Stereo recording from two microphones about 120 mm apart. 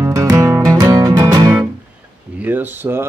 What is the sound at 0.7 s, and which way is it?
Music, 35° right (ahead or behind).